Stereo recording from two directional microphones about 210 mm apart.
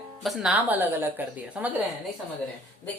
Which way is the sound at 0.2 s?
Centre (ahead or behind).